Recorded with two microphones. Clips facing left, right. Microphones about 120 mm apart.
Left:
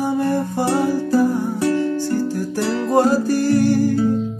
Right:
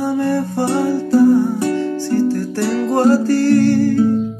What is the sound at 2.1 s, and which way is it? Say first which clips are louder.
Music: right 4 dB; 15° left (ahead or behind).